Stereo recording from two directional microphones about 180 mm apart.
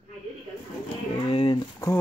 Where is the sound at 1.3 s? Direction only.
30° left (ahead or behind).